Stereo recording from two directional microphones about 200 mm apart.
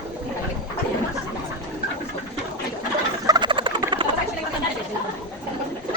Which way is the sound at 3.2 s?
20° right (ahead or behind).